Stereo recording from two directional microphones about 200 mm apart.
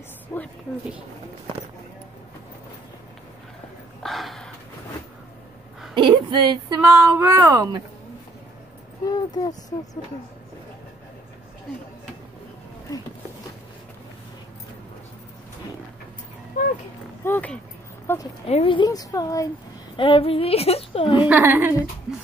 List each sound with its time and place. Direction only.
4.0 s a sound: centre (ahead or behind)
5.9 s speech: 20° right (ahead or behind)
9.0 s speech: 20° left (ahead or behind)
17.2 s speech: 10° left (ahead or behind)
18.5 s speech: 25° left (ahead or behind)
20.0 s speech: 25° left (ahead or behind)
21.2 s speech: 10° right (ahead or behind)